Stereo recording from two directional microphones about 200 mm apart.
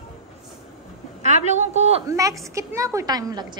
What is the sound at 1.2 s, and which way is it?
Speech, 35° right (ahead or behind).